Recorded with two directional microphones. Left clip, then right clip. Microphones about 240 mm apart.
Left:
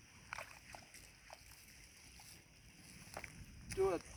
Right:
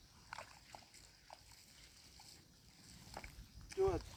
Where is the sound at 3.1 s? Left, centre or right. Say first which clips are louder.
Left 2 dB; centre.